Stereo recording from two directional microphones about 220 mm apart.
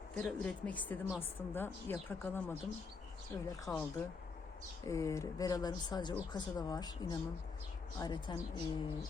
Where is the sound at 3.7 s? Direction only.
10° left (ahead or behind).